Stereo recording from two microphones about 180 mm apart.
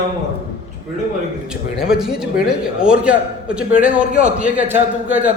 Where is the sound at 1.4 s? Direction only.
5° right (ahead or behind).